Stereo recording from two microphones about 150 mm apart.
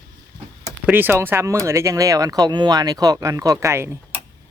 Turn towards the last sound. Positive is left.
turn(degrees=-20)  # may be behind; listen again after turning